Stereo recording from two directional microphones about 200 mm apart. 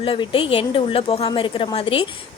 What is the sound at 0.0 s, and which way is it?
A woman's voice, 25° left (ahead or behind).